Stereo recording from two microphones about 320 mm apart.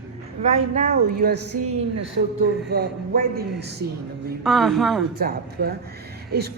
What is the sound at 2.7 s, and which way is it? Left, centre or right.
A woman's voice, right.